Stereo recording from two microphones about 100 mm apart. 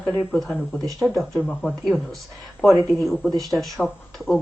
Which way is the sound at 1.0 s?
Centre (ahead or behind).